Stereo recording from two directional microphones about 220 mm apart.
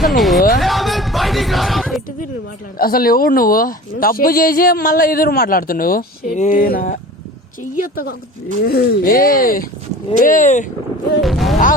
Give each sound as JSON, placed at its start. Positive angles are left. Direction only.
{"t": 0.2, "sound": "a sound", "side_deg": 0}
{"t": 2.7, "sound": "speech", "side_deg": 40}
{"t": 11.2, "sound": "speech", "side_deg": 0}